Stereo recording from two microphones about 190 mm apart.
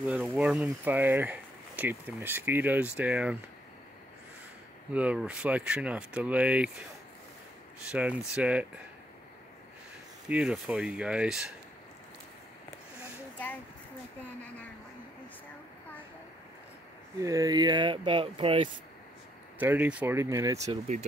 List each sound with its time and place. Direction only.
0.0 s speech: 5° right (ahead or behind)
4.9 s speech: 5° right (ahead or behind)
7.9 s speech: 5° right (ahead or behind)
10.2 s speech: 5° right (ahead or behind)
17.2 s speech: 15° right (ahead or behind)
19.6 s speech: 10° right (ahead or behind)